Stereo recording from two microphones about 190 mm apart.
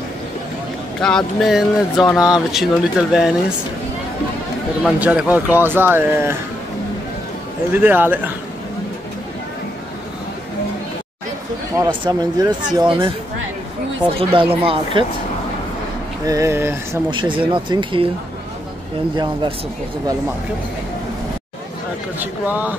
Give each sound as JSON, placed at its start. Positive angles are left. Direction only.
{"t": 1.0, "sound": "speech", "side_deg": 0}
{"t": 4.8, "sound": "speech", "side_deg": -5}
{"t": 7.7, "sound": "speech", "side_deg": -10}
{"t": 11.7, "sound": "speech", "side_deg": -20}
{"t": 14.1, "sound": "speech", "side_deg": -30}
{"t": 16.3, "sound": "speech", "side_deg": -15}
{"t": 17.1, "sound": "speech", "side_deg": -25}
{"t": 22.2, "sound": "speech", "side_deg": -10}